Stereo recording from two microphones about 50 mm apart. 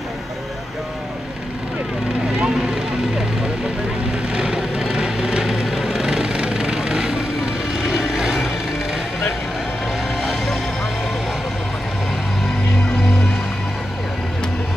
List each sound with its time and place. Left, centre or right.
2.5 s vehicle: centre
4.3 s vehicle: centre
10.2 s music: centre